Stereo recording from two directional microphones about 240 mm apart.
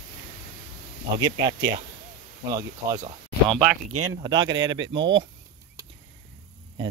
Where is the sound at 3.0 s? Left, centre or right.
Right.